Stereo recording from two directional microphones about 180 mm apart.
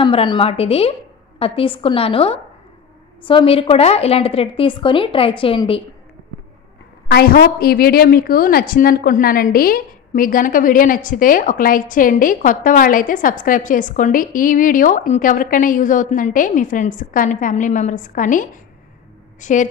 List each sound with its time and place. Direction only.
0.0 s a woman's voice: 30° left (ahead or behind)
7.1 s a woman's voice: 60° left (ahead or behind)